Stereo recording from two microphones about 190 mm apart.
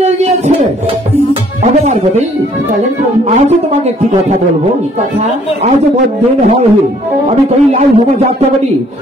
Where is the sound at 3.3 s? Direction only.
35° right (ahead or behind).